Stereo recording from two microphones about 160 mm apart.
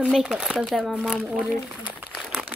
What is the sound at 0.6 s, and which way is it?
Speech, centre (ahead or behind).